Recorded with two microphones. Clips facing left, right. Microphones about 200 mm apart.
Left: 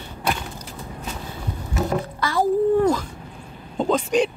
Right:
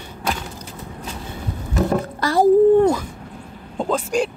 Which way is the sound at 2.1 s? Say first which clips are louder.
Right 5 dB; 40° right (ahead or behind).